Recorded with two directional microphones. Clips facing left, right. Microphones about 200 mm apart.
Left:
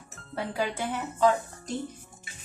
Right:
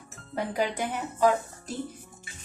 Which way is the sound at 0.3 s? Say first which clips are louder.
Right 2 dB; 15° right (ahead or behind).